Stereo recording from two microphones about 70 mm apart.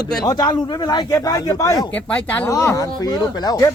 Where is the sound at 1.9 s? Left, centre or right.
Left.